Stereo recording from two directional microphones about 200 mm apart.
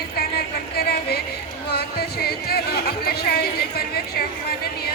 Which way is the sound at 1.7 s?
50° left (ahead or behind).